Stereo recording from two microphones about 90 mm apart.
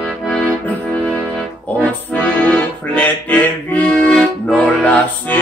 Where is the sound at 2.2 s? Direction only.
15° left (ahead or behind).